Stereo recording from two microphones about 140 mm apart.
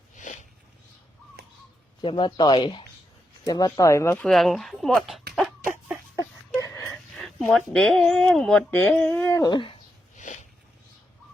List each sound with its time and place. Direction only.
0.2 s a sound: 65° left (ahead or behind)
2.0 s speech: 35° left (ahead or behind); by 4.3 s 15° left (ahead or behind)
4.3 s speech: centre (ahead or behind)
6.1 s a sound: 20° left (ahead or behind)
6.9 s speech: centre (ahead or behind); by 9.5 s 20° left (ahead or behind)
9.5 s speech: 35° left (ahead or behind)
10.2 s sniff: 60° left (ahead or behind)